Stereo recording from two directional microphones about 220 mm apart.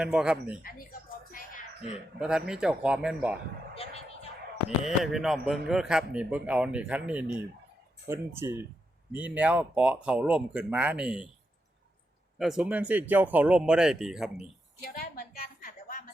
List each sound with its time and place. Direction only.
0.0 s a man's voice: 5° right (ahead or behind)
2.1 s a man's voice: 5° right (ahead or behind)
5.1 s a man's voice: centre (ahead or behind)
12.4 s a man's voice: 5° right (ahead or behind)
14.8 s a sound: 40° left (ahead or behind)